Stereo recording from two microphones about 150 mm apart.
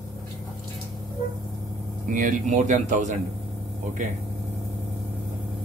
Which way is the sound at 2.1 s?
60° right (ahead or behind).